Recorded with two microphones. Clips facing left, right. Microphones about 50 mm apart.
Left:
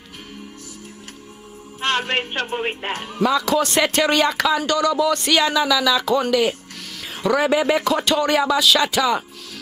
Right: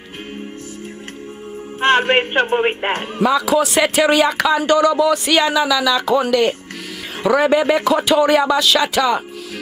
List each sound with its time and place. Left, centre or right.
1.8 s speech: right
3.2 s speech: centre
4.6 s speech: centre